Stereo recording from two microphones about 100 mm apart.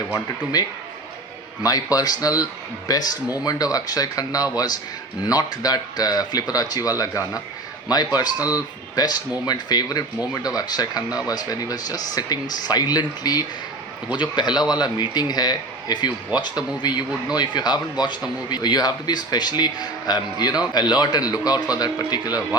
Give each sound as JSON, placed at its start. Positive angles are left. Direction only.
{"t": 0.5, "sound": "speech", "side_deg": 40}